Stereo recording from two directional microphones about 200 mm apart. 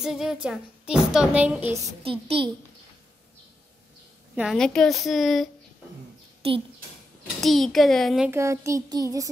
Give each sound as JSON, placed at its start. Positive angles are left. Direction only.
{"t": 0.0, "sound": "a woman's voice", "side_deg": 0}
{"t": 2.0, "sound": "a child's voice", "side_deg": -25}
{"t": 4.4, "sound": "a woman's voice", "side_deg": 0}
{"t": 7.3, "sound": "a woman's voice", "side_deg": 0}
{"t": 8.3, "sound": "speech", "side_deg": -15}